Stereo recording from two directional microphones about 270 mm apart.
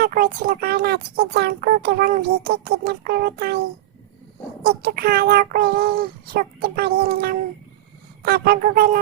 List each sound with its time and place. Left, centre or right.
0.0 s speech: right
4.6 s speech: right